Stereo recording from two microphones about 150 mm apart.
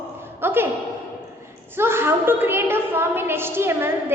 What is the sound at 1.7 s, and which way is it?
A woman's voice, 15° right (ahead or behind).